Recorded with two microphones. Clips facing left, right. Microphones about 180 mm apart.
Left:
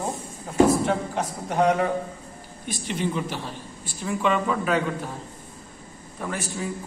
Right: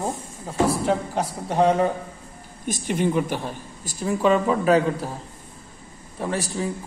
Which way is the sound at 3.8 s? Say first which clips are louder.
Right 4 dB; 40° right (ahead or behind).